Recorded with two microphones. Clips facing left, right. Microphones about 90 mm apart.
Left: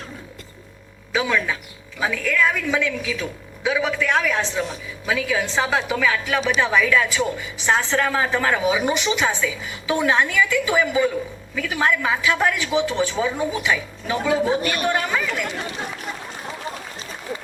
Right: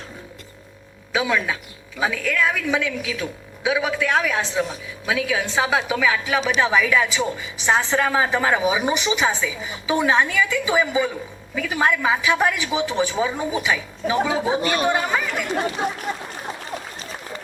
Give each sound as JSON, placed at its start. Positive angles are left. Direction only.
{"t": 1.1, "sound": "a woman's voice", "side_deg": -10}
{"t": 14.6, "sound": "speech", "side_deg": -25}